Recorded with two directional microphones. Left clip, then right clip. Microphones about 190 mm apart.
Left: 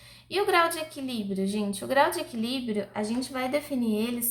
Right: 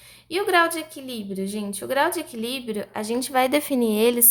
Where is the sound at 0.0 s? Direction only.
30° right (ahead or behind).